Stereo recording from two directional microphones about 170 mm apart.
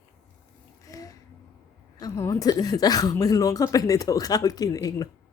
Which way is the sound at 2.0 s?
20° left (ahead or behind).